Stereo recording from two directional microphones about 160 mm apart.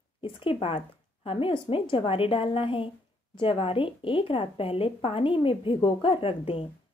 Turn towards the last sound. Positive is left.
turn(degrees=35)  # may be behind; listen again after turning